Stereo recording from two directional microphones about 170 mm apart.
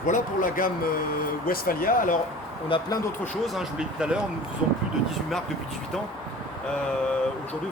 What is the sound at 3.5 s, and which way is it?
Speech, 5° right (ahead or behind).